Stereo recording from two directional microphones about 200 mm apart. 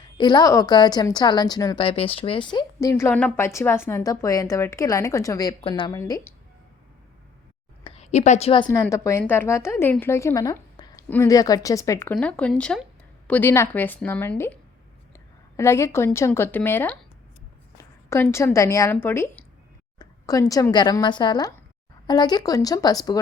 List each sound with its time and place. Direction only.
0.2 s a woman's voice: 20° left (ahead or behind)
7.9 s a woman's voice: 30° left (ahead or behind)
8.6 s a woman's voice: 15° left (ahead or behind)
20.0 s a sound: 20° left (ahead or behind)
20.5 s speech: 20° left (ahead or behind)